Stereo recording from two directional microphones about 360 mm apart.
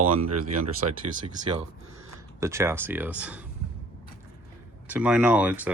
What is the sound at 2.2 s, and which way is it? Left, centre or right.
Speech, centre.